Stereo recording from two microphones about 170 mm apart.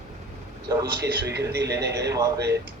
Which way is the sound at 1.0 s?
80° right.